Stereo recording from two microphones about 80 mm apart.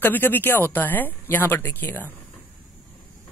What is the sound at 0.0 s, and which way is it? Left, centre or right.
Speech, left.